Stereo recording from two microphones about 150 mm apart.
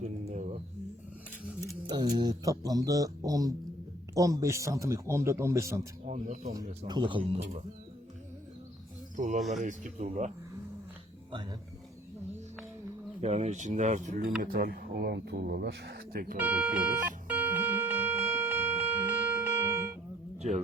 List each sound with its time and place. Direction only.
0.0 s a sound: 50° right (ahead or behind)
1.9 s a man's voice: 30° right (ahead or behind)
6.1 s speech: 55° right (ahead or behind)
6.6 s speech: 30° right (ahead or behind)
9.1 s speech: 55° right (ahead or behind)
13.2 s speech: 50° right (ahead or behind); by 14.3 s 65° right (ahead or behind)
14.4 s speech: 85° right
16.4 s music: 10° right (ahead or behind)